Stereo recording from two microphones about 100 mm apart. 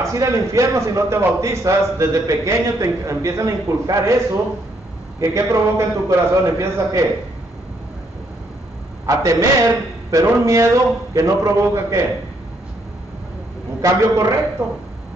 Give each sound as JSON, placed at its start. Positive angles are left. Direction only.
{"t": 0.0, "sound": "a man's voice", "side_deg": -30}
{"t": 9.0, "sound": "a man's voice", "side_deg": -35}
{"t": 13.7, "sound": "a man's voice", "side_deg": -35}